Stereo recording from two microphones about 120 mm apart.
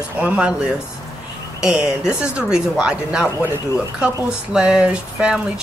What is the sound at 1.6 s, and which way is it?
A woman's voice, 10° right (ahead or behind).